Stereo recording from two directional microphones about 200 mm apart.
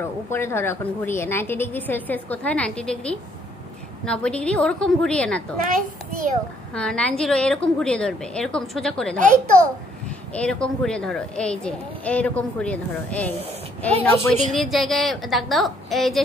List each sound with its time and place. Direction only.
0.0 s a woman's voice: 10° left (ahead or behind)
5.6 s a child's voice: 45° right (ahead or behind)
6.7 s a woman's voice: 5° left (ahead or behind)
10.3 s a woman's voice: 5° left (ahead or behind)